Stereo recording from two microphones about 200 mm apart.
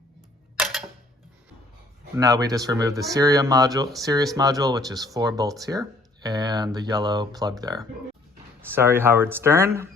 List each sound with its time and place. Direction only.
0.5 s camera: centre (ahead or behind)
2.1 s speech: 20° right (ahead or behind)